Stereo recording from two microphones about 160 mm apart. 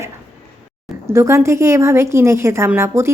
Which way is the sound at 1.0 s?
15° right (ahead or behind).